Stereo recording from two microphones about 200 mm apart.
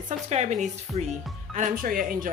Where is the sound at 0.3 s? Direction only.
35° right (ahead or behind).